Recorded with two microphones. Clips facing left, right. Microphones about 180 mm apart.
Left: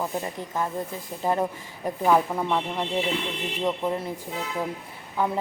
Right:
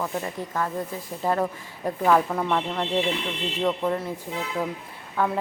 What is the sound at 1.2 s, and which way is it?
Speech, 15° left (ahead or behind).